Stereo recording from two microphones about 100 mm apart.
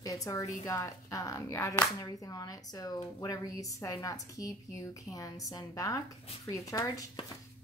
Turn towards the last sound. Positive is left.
turn(degrees=35)  # may be behind; listen again after turning